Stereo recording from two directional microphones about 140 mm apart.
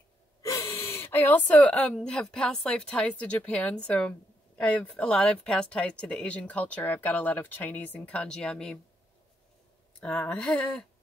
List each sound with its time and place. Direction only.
0.4 s gasp: 20° left (ahead or behind)
2.0 s speech: 5° left (ahead or behind)
9.9 s speech: 10° left (ahead or behind)